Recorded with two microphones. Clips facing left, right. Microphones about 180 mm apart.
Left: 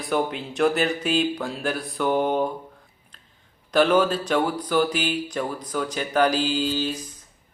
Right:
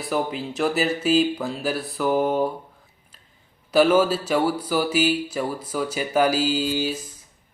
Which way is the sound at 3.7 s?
5° right (ahead or behind).